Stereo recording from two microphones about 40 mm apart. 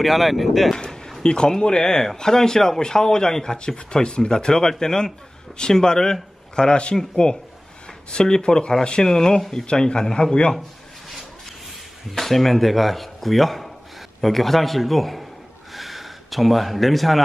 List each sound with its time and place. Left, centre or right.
0.0 s speech: centre
0.7 s a sound: centre
1.2 s a man's voice: left
11.1 s rub: centre
12.1 s speech: centre
15.7 s gasp: centre